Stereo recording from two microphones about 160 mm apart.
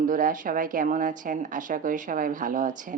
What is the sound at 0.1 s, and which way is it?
A woman's voice, 60° right (ahead or behind).